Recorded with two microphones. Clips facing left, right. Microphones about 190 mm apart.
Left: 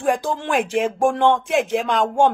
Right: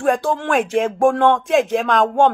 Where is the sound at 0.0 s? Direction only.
15° left (ahead or behind).